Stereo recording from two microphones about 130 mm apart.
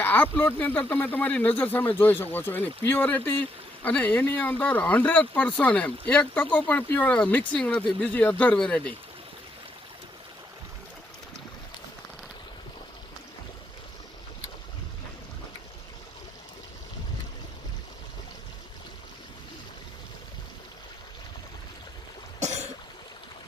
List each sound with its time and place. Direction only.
0.0 s speech: 15° left (ahead or behind)
22.4 s throat clearing: 60° right (ahead or behind)